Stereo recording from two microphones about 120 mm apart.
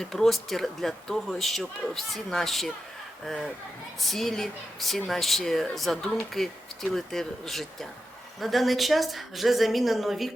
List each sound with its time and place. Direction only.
0.0 s speech: 5° left (ahead or behind)